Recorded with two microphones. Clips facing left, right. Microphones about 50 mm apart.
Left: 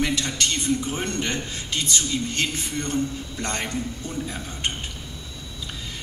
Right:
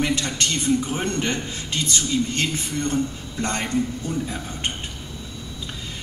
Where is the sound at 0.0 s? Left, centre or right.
Right.